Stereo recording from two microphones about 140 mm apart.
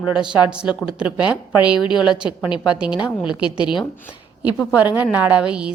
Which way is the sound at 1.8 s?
35° left (ahead or behind).